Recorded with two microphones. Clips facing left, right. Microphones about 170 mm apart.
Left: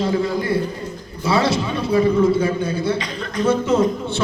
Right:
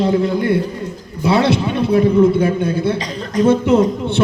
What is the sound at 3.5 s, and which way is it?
Speech, 60° right (ahead or behind).